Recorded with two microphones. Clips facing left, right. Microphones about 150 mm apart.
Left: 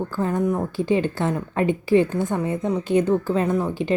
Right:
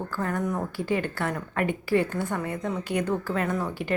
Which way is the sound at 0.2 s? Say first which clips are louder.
Left 6 dB; 20° left (ahead or behind).